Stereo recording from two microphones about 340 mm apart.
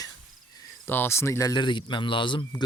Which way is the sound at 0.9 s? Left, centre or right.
Centre.